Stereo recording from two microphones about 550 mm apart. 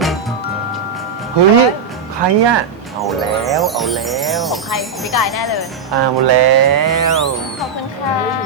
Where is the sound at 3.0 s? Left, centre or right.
Centre.